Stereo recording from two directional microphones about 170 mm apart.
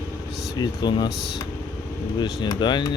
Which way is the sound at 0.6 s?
25° left (ahead or behind).